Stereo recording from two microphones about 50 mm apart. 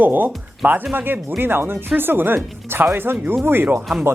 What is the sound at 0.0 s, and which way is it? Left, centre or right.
Speech, right.